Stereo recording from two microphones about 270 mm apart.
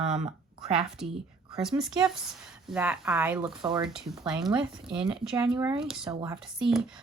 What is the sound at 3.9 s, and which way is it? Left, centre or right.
Speech, centre.